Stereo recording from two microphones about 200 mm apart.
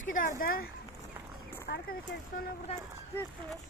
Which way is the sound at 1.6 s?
50° left (ahead or behind).